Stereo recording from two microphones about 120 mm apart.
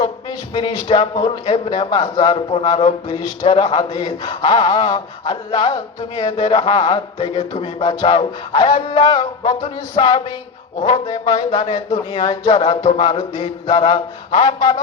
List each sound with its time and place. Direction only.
0.0 s speech: 40° left (ahead or behind)
12.1 s music: 45° left (ahead or behind)